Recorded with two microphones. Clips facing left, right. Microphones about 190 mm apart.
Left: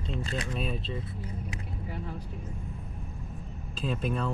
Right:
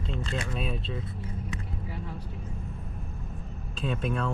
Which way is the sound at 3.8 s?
Centre (ahead or behind).